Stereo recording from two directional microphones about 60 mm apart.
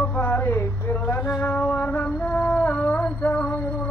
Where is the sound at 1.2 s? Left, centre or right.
Centre.